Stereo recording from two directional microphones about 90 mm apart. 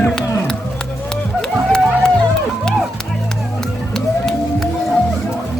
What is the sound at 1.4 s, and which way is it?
Music, 10° left (ahead or behind).